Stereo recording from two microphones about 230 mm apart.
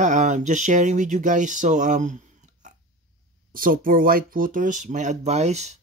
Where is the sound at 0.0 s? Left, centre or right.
Right.